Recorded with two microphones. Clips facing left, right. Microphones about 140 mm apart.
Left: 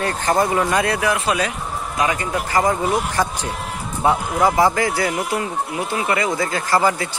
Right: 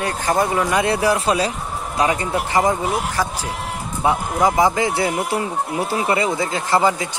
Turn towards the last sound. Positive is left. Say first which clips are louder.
# right 1 dB
turn(degrees=-20)  # may be behind; listen again after turning